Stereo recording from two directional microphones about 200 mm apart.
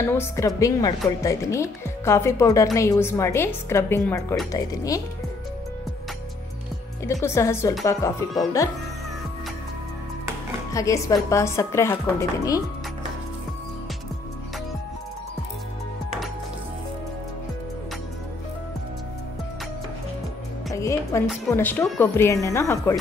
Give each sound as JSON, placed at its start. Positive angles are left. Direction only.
{"t": 0.0, "sound": "speech", "side_deg": 10}
{"t": 7.1, "sound": "speech", "side_deg": 15}
{"t": 10.7, "sound": "speech", "side_deg": 15}
{"t": 20.7, "sound": "a woman's voice", "side_deg": 15}